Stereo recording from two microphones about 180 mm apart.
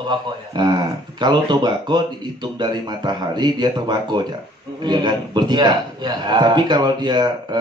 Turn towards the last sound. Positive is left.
turn(degrees=-25)  # may be behind; listen again after turning